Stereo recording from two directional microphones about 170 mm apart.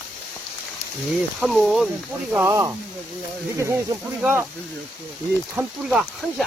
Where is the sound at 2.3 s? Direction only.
15° right (ahead or behind).